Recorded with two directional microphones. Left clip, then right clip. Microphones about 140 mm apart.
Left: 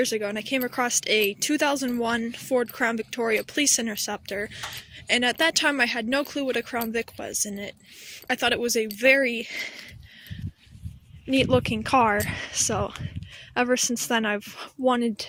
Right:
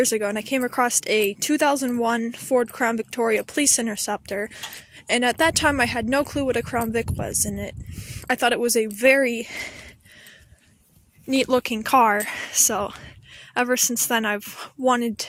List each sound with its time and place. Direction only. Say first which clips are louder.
0.0 s speech: right 4 dB; 45° right (ahead or behind)
11.3 s speech: right 1 dB; 10° right (ahead or behind)